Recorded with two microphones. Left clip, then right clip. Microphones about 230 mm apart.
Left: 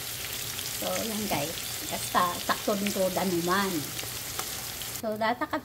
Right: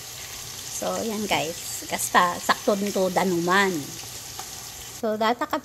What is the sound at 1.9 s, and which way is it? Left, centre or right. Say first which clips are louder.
Sizzle: right 6 dB; right.